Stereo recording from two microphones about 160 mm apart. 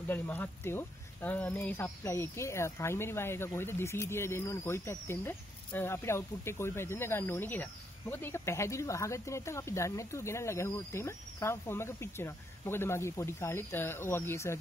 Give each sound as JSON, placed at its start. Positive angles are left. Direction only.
{"t": 0.1, "sound": "speech", "side_deg": 10}